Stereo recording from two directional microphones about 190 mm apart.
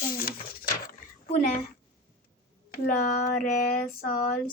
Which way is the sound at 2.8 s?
50° left (ahead or behind).